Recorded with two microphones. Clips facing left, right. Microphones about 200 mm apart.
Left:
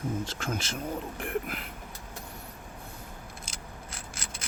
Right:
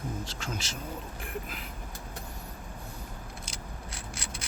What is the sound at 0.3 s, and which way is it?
Speech, 50° left (ahead or behind).